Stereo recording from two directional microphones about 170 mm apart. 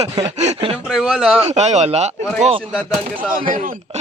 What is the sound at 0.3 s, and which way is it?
Speech, 40° right (ahead or behind).